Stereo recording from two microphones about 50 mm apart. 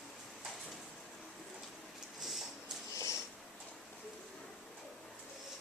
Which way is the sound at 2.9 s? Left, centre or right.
Left.